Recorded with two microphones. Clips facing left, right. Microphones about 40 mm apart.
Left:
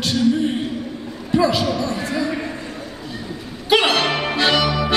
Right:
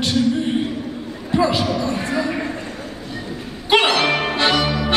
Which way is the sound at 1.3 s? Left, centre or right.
Right.